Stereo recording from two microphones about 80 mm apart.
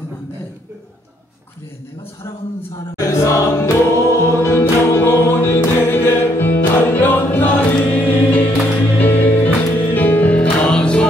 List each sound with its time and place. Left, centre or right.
3.0 s music: left; by 11.1 s centre